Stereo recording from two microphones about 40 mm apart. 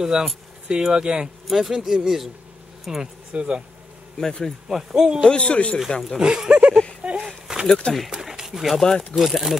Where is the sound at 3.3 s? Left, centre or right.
Right.